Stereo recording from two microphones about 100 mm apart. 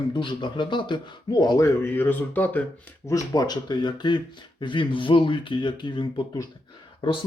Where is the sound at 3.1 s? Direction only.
35° left (ahead or behind); by 6.2 s 50° left (ahead or behind).